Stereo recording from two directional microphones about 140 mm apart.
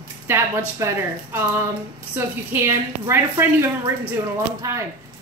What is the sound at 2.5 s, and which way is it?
A woman's voice, 20° right (ahead or behind).